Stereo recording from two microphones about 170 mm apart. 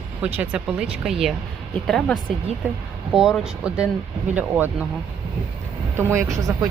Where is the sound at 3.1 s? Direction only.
Centre (ahead or behind).